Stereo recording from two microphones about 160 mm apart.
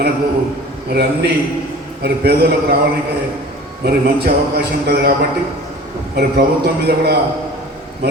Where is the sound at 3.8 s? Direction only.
80° right.